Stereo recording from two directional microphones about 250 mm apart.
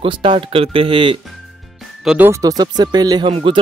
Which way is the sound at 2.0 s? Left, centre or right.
Centre.